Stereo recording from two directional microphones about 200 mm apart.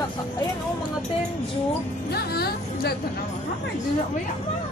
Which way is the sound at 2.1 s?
50° left (ahead or behind).